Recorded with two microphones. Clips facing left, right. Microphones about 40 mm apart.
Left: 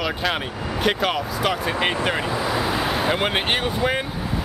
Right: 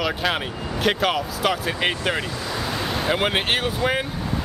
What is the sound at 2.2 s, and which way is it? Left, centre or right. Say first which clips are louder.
Vehicle: left 5 dB; centre.